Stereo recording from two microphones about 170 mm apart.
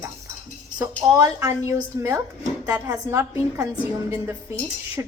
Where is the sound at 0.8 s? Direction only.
20° right (ahead or behind).